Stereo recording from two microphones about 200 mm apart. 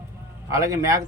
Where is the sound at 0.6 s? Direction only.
15° right (ahead or behind).